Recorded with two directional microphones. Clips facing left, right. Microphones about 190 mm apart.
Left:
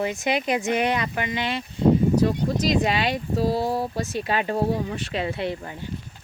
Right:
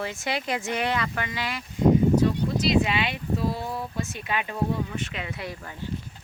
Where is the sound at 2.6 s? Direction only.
40° left (ahead or behind).